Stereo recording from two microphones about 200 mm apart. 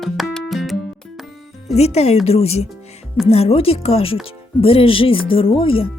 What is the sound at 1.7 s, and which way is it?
Speech, 30° left (ahead or behind).